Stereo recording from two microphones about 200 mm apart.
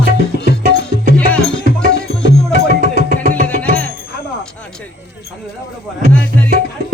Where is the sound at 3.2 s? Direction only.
45° right (ahead or behind).